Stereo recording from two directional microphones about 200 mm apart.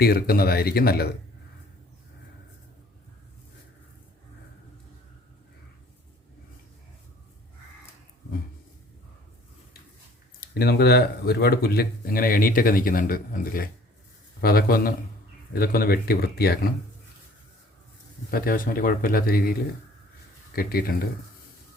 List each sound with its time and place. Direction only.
0.0 s speech: 50° left (ahead or behind)
10.4 s speech: 50° left (ahead or behind)
18.3 s speech: 45° left (ahead or behind)
20.6 s speech: 50° left (ahead or behind)